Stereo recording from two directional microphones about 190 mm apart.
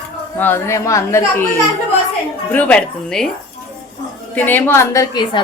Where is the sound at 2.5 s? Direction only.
5° left (ahead or behind).